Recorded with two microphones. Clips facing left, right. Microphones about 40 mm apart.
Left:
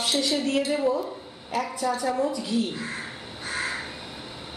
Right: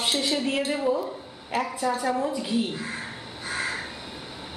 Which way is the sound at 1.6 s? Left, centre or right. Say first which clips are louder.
Even; centre.